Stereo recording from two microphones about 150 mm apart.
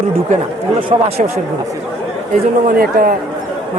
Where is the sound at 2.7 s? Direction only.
80° right.